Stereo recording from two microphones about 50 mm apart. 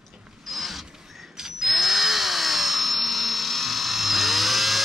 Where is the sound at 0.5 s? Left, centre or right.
Centre.